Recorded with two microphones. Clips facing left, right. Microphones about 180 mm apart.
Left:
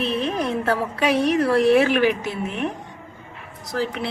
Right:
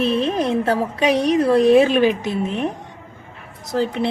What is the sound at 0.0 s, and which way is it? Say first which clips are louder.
A woman's voice: right 4 dB; 25° right (ahead or behind).